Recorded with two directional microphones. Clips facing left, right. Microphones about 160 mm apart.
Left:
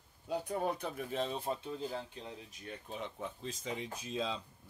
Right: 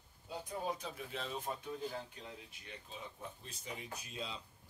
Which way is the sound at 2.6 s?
60° left (ahead or behind).